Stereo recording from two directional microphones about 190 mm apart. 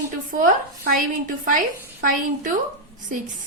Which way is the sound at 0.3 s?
45° right (ahead or behind).